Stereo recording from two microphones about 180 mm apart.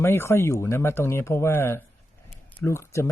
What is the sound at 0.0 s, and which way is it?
Speech, 15° left (ahead or behind).